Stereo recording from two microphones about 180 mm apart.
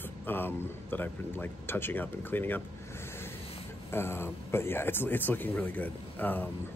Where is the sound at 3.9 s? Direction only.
15° left (ahead or behind).